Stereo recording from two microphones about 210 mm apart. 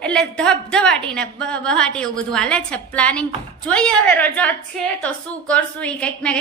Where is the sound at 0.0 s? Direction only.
5° left (ahead or behind).